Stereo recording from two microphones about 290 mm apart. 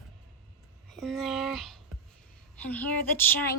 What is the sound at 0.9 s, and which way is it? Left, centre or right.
Speech, centre.